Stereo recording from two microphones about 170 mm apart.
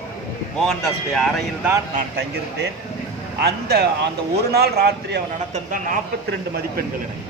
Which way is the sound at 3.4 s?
70° right (ahead or behind).